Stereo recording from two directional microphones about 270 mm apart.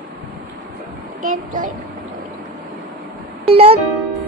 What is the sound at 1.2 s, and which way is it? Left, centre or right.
Speech, right.